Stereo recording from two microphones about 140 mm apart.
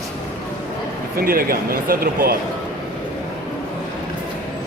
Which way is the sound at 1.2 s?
90° right.